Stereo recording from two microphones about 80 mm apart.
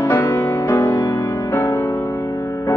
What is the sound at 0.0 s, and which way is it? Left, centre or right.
Music, left.